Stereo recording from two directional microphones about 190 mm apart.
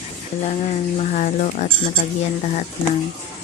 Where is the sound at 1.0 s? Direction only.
40° left (ahead or behind).